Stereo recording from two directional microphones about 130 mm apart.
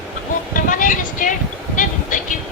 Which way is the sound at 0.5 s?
90° left.